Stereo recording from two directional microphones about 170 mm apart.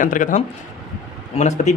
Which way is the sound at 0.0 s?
50° left (ahead or behind).